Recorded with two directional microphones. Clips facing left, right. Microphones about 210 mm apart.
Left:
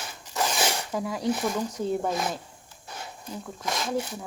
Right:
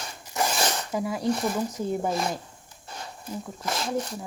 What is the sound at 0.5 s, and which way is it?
Zipper, 10° left (ahead or behind).